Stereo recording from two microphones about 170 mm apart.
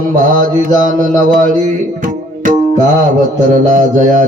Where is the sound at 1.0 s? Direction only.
50° right (ahead or behind).